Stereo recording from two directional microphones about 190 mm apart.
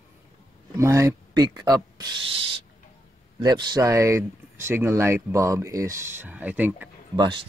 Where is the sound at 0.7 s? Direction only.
15° right (ahead or behind).